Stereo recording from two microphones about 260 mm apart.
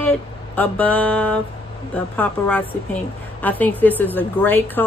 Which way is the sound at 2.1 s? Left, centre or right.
Centre.